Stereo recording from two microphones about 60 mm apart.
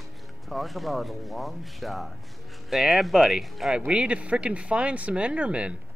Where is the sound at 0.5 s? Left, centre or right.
Centre.